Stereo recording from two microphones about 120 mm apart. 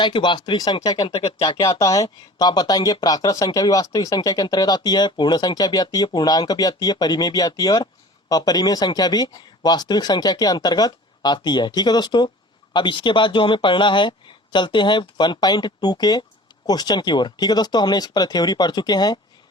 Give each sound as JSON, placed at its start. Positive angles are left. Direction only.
{"t": 0.0, "sound": "speech", "side_deg": 40}
{"t": 1.4, "sound": "speech", "side_deg": 30}